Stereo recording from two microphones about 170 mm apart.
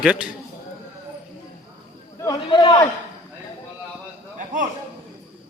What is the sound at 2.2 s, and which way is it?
Chatter, 30° left (ahead or behind).